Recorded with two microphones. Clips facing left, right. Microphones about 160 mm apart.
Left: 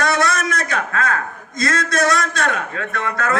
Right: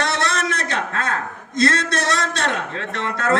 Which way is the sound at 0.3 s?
30° right (ahead or behind).